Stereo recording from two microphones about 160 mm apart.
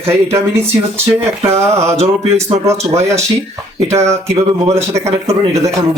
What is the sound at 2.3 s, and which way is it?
Speech, 15° right (ahead or behind).